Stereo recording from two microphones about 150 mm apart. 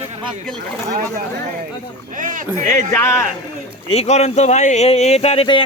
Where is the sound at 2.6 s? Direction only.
20° left (ahead or behind).